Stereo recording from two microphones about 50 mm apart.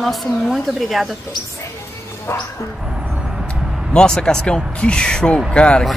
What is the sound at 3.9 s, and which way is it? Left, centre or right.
Speech, centre.